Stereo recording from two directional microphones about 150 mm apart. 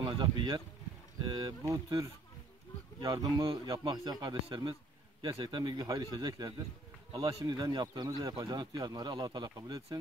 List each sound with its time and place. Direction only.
0.0 s a man's voice: 30° right (ahead or behind)